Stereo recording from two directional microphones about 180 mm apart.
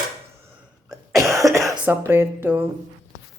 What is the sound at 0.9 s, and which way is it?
Cough, 15° right (ahead or behind).